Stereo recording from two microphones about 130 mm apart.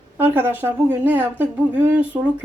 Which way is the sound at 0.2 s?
15° right (ahead or behind).